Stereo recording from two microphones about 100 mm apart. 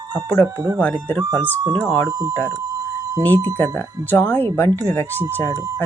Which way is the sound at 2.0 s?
40° right (ahead or behind).